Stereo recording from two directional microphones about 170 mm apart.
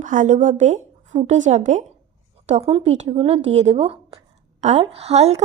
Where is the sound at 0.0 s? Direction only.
50° right (ahead or behind).